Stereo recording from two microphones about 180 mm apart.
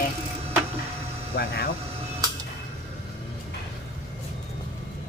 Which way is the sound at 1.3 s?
55° left (ahead or behind).